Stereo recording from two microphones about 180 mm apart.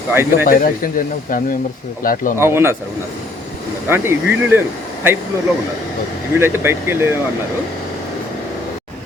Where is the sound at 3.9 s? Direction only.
15° right (ahead or behind).